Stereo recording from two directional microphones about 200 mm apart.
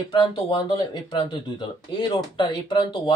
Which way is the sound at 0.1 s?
25° left (ahead or behind).